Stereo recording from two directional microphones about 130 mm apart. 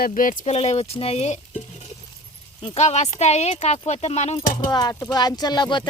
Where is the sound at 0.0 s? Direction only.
90° left.